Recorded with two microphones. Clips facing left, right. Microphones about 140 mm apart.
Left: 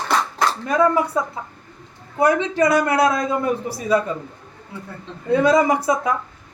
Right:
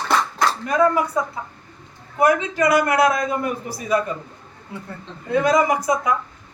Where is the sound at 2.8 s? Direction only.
25° left (ahead or behind).